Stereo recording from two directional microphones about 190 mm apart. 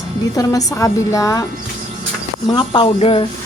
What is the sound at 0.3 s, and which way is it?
A woman's voice, 20° left (ahead or behind).